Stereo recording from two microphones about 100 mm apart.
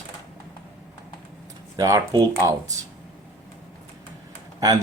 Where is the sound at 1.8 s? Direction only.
35° right (ahead or behind).